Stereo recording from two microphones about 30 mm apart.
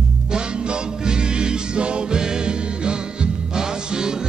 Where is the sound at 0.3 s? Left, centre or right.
Right.